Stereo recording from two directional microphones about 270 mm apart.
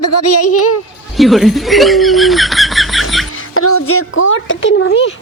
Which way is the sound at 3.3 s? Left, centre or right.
Left.